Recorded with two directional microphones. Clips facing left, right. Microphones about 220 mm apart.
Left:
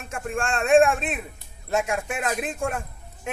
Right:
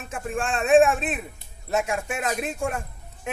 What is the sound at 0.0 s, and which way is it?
A man's voice, centre (ahead or behind).